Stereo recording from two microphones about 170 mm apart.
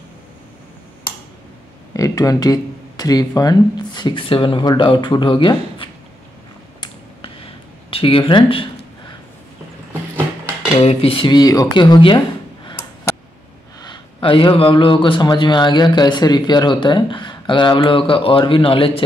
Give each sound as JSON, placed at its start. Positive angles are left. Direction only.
{"t": 2.0, "sound": "a man's voice", "side_deg": 20}
{"t": 7.9, "sound": "speech", "side_deg": 30}
{"t": 10.8, "sound": "a man's voice", "side_deg": 35}
{"t": 13.7, "sound": "a man's voice", "side_deg": 30}